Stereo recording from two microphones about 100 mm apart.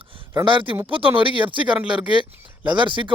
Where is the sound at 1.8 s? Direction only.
10° right (ahead or behind).